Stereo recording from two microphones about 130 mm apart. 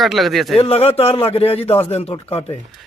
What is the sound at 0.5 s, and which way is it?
Speech, 50° left (ahead or behind).